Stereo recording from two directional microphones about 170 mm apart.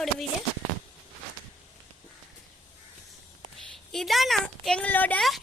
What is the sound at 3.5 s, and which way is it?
A woman's voice, centre (ahead or behind).